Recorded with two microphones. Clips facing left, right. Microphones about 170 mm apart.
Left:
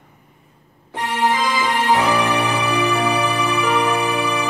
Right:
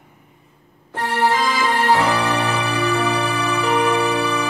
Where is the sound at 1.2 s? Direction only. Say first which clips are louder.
Even; 15° left (ahead or behind).